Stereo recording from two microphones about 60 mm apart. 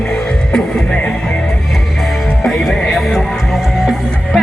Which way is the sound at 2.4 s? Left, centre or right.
Centre.